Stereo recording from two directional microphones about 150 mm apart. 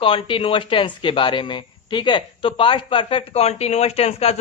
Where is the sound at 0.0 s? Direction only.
35° left (ahead or behind).